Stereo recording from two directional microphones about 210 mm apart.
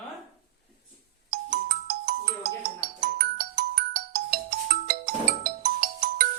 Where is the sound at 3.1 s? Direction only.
45° right (ahead or behind).